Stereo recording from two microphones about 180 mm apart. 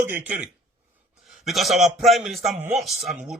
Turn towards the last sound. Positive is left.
turn(degrees=-5)  # may be behind; listen again after turning